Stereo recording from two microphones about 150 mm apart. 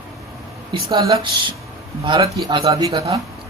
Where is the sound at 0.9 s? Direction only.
25° right (ahead or behind).